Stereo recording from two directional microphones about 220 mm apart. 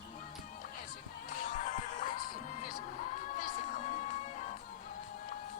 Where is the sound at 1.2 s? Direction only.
35° left (ahead or behind).